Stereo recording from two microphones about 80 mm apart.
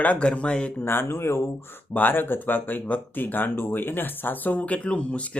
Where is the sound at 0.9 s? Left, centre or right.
Left.